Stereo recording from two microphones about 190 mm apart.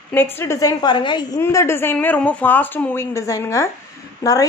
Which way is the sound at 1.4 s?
15° left (ahead or behind).